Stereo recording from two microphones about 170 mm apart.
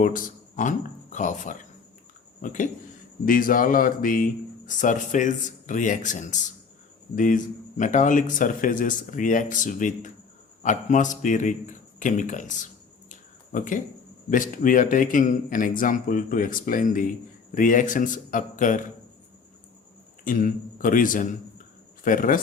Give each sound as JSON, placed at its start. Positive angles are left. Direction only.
{"t": 0.0, "sound": "a man's voice", "side_deg": 55}
{"t": 20.2, "sound": "speech", "side_deg": 55}